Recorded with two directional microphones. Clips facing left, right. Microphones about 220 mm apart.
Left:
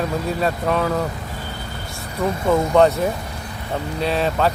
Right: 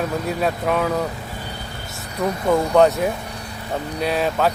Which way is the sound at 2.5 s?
Centre (ahead or behind).